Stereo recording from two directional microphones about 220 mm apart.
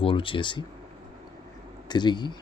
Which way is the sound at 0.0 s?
25° left (ahead or behind).